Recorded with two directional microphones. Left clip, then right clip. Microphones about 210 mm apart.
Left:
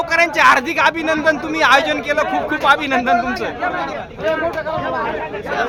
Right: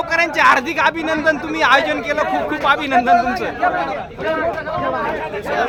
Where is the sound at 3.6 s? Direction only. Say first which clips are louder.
Right 5 dB; 10° right (ahead or behind).